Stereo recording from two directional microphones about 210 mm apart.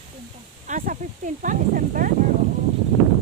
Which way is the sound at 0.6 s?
40° right (ahead or behind).